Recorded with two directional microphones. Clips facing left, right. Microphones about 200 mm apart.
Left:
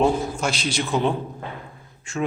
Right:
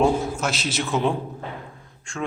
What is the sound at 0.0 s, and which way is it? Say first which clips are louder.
A man's voice: even; centre (ahead or behind).